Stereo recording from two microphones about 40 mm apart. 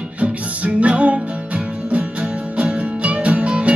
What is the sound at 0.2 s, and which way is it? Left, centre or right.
Music, right.